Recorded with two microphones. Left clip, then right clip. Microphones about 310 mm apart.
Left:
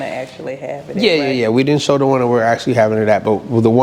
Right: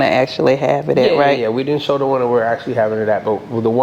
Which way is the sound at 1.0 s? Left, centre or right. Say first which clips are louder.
Left 3 dB; left.